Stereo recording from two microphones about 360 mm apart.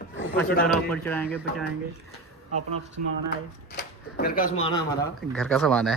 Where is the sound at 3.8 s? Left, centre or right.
Left.